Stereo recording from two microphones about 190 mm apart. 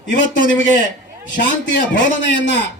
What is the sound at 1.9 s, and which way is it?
Speech, 70° left (ahead or behind).